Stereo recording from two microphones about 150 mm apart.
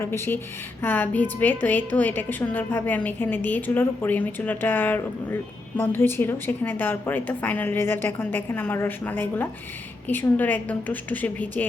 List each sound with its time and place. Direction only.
0.0 s a woman's voice: 15° left (ahead or behind)